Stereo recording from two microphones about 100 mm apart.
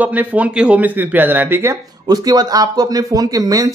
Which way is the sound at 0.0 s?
15° right (ahead or behind).